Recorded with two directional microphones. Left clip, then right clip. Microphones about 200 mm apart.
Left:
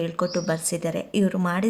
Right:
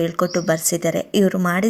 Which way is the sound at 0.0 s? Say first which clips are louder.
Right 5 dB; 20° right (ahead or behind).